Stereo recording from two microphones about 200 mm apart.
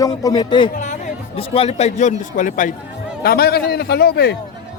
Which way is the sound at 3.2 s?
50° left (ahead or behind).